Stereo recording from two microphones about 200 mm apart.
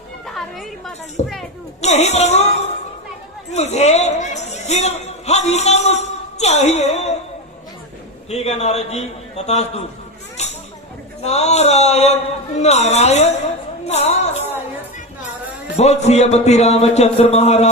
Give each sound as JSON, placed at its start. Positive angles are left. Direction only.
{"t": 0.3, "sound": "a sound", "side_deg": 0}
{"t": 1.2, "sound": "a man's voice", "side_deg": 35}
{"t": 3.5, "sound": "speech", "side_deg": 35}
{"t": 8.3, "sound": "a man's voice", "side_deg": 35}
{"t": 11.2, "sound": "a man's voice", "side_deg": 35}
{"t": 13.8, "sound": "music", "side_deg": 30}
{"t": 15.7, "sound": "a man's voice", "side_deg": 35}